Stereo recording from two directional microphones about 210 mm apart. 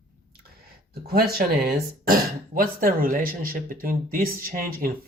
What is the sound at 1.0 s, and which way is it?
Speech, 50° right (ahead or behind).